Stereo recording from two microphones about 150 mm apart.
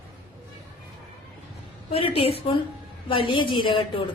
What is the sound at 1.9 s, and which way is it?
A woman's voice, 40° left (ahead or behind).